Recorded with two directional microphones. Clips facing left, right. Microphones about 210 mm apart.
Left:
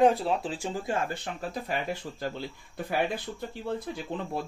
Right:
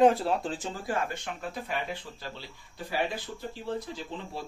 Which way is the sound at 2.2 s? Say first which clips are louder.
Left 8 dB; 55° left (ahead or behind).